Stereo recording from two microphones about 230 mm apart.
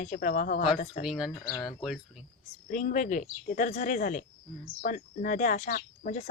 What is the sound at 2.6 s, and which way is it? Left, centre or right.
A woman's voice, left.